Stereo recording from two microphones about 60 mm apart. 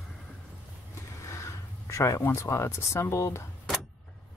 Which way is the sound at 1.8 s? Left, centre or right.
Left.